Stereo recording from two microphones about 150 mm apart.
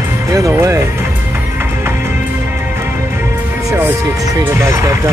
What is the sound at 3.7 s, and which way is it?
Speech, 15° right (ahead or behind).